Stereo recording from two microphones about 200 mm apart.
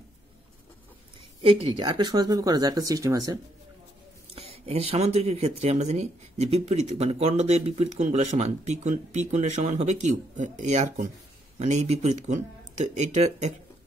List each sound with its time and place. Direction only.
1.4 s speech: 25° right (ahead or behind)
4.4 s speech: 30° right (ahead or behind)